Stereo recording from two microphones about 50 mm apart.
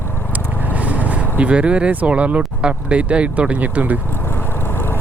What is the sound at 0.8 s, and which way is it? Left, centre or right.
Speech, right.